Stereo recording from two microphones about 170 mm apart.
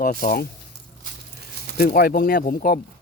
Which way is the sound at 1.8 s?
60° left (ahead or behind).